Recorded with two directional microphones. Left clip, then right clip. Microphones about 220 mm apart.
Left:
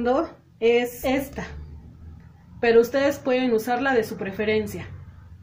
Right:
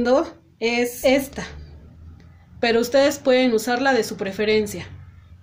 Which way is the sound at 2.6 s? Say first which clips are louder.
Right 1 dB; 45° right (ahead or behind).